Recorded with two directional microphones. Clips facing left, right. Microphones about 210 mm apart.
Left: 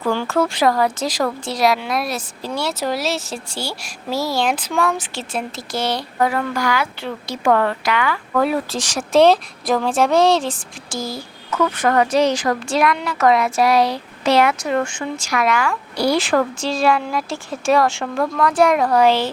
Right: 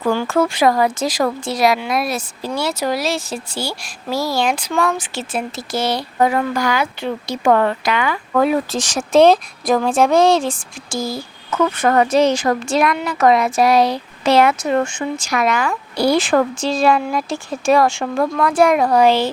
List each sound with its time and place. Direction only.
0.0 s speech: 10° right (ahead or behind)
6.1 s speech: 20° right (ahead or behind)
11.5 s speech: 25° right (ahead or behind)